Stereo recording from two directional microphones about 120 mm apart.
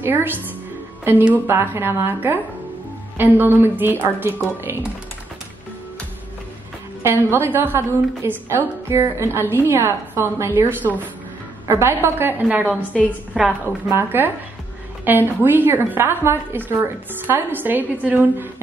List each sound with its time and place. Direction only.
0.0 s a woman's voice: 15° right (ahead or behind)
7.0 s a woman's voice: 20° right (ahead or behind)